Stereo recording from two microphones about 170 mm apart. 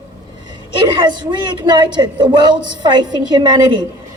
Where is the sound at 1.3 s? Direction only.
25° right (ahead or behind).